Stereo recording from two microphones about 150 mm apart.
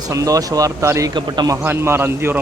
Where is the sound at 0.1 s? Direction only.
20° right (ahead or behind).